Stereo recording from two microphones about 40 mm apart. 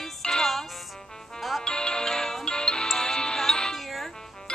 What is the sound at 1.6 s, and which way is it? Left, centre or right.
Music, left.